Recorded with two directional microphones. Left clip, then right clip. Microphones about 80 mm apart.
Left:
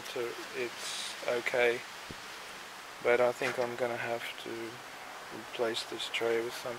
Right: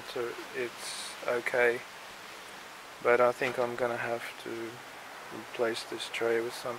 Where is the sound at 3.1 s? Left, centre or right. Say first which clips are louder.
Right 2 dB; right.